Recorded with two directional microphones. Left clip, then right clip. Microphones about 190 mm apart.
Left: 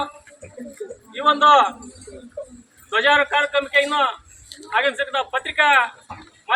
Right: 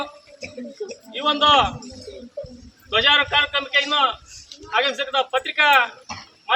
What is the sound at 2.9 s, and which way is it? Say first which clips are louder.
A man's voice: even; 55° right (ahead or behind).